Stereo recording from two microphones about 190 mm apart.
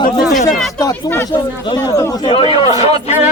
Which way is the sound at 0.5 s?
Centre (ahead or behind).